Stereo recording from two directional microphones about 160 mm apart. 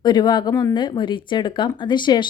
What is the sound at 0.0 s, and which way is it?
Speech, 25° left (ahead or behind).